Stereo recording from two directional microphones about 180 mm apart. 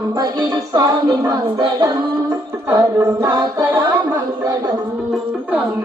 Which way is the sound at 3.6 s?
15° right (ahead or behind).